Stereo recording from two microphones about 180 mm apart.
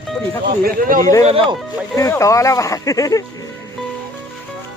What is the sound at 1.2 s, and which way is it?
Speech, 35° right (ahead or behind).